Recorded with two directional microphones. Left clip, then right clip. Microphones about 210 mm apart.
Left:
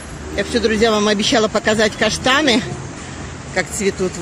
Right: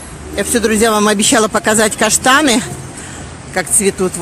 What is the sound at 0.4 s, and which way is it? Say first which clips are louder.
Speech: right 3 dB; 30° right (ahead or behind).